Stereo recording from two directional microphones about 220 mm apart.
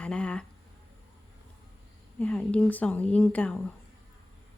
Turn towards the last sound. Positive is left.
turn(degrees=5)  # may be behind; listen again after turning